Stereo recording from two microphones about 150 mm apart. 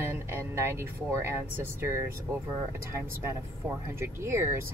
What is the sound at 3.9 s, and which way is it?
Speech, 15° right (ahead or behind).